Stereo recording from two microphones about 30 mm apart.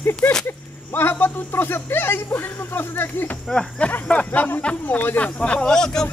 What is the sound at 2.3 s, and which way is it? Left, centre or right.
Speech, left.